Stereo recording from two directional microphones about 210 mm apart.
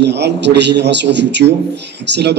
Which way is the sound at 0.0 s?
55° right (ahead or behind).